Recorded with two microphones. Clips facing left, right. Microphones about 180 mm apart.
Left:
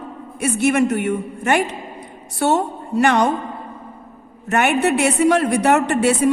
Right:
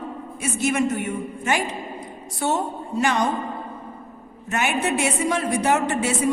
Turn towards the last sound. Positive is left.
turn(degrees=65)  # may be behind; listen again after turning